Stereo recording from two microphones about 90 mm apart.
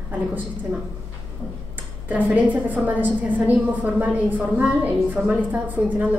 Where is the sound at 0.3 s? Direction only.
20° right (ahead or behind).